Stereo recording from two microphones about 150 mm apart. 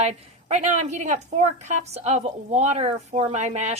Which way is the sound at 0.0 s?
50° right (ahead or behind).